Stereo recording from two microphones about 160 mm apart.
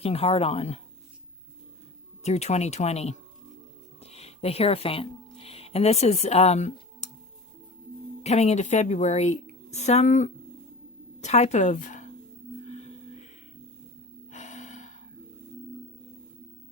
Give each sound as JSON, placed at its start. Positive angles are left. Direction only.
{"t": 0.0, "sound": "speech", "side_deg": 40}
{"t": 2.2, "sound": "speech", "side_deg": 45}
{"t": 8.2, "sound": "speech", "side_deg": 45}
{"t": 12.6, "sound": "music", "side_deg": 45}
{"t": 14.3, "sound": "gasp", "side_deg": 45}